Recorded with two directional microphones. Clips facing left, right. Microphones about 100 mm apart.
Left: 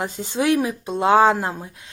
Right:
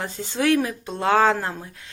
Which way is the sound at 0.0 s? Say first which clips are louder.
Left 1 dB; 15° left (ahead or behind).